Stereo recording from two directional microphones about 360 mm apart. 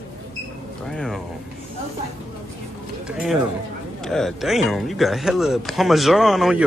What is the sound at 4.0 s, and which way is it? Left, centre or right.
Speech, centre.